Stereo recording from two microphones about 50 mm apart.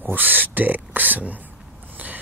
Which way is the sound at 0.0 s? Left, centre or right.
Right.